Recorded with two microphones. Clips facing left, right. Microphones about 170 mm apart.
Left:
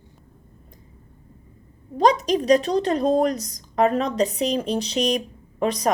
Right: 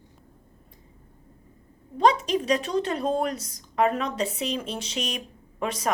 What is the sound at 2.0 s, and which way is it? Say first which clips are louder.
A woman's voice: left 3 dB; 40° left (ahead or behind).